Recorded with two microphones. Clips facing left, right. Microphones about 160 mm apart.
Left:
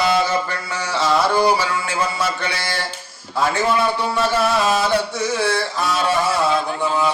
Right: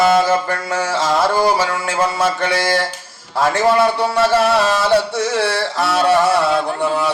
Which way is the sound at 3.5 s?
80° right.